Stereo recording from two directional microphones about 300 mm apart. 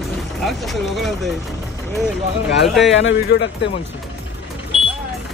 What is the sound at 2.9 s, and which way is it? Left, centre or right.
Speech, left.